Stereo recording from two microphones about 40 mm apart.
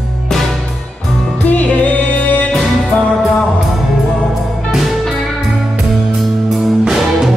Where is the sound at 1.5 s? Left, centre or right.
Left.